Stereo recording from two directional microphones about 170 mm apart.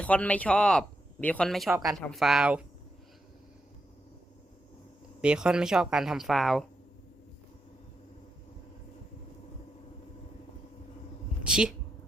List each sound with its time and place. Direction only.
0.0 s speech: 10° left (ahead or behind)
1.7 s speech: 20° right (ahead or behind)
2.0 s speech: centre (ahead or behind)
5.2 s speech: 5° right (ahead or behind)
11.4 s a woman's voice: 5° right (ahead or behind)